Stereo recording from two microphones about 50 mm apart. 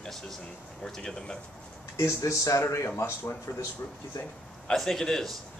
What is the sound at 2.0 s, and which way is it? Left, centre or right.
Speech, left.